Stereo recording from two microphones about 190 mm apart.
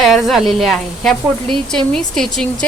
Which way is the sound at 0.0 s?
Centre (ahead or behind).